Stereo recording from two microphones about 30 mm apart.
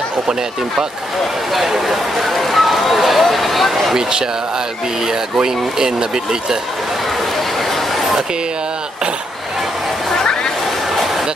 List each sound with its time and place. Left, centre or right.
1.7 s speech: centre
2.3 s speech: centre
5.0 s speech: centre